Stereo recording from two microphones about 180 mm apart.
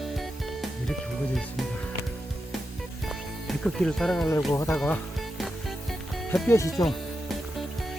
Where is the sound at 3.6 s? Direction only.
Centre (ahead or behind).